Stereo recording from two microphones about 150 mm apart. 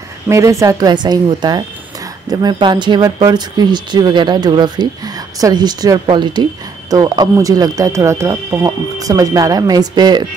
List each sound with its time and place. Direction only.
0.3 s speech: 20° right (ahead or behind)